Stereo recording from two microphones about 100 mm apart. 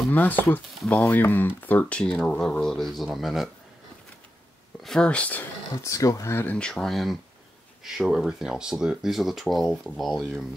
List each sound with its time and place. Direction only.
0.1 s speech: 15° left (ahead or behind); by 3.4 s centre (ahead or behind)
4.8 s speech: 10° left (ahead or behind)
5.8 s speech: 35° left (ahead or behind)
6.3 s speech: 15° left (ahead or behind); by 10.4 s centre (ahead or behind)